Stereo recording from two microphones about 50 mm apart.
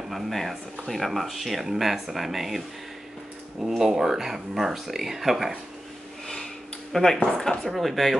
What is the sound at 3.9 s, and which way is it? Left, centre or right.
Speech, centre.